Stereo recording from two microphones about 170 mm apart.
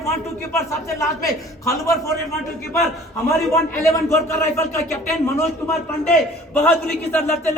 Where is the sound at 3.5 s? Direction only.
15° left (ahead or behind).